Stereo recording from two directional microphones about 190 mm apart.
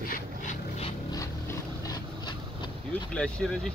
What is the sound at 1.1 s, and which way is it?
Vehicle, 15° left (ahead or behind).